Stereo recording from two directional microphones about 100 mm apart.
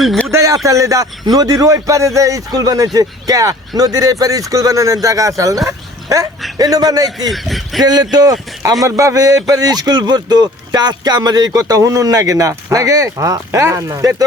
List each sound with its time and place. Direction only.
0.3 s speech: 30° right (ahead or behind)
5.6 s bow-wow: 35° right (ahead or behind)
6.6 s speech: 35° right (ahead or behind)
7.3 s speech: centre (ahead or behind)
7.8 s speech: 45° right (ahead or behind)